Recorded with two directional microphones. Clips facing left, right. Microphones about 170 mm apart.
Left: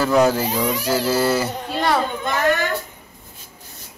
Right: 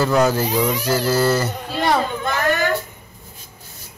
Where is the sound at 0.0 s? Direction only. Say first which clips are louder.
Even; 5° left (ahead or behind).